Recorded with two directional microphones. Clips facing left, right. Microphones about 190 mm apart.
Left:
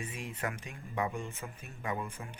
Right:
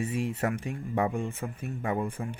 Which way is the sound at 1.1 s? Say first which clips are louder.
Right 8 dB; 55° right (ahead or behind).